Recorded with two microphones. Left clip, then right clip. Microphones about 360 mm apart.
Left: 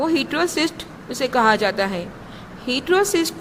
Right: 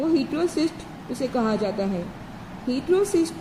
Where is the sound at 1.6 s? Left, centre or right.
Left.